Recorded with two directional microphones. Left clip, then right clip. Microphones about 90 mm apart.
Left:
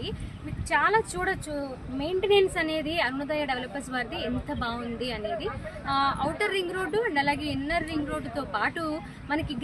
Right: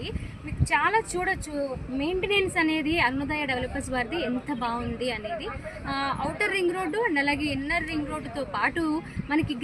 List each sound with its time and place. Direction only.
0.7 s a woman's voice: 20° left (ahead or behind)